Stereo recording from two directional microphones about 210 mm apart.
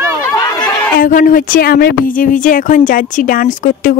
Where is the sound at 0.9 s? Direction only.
40° left (ahead or behind).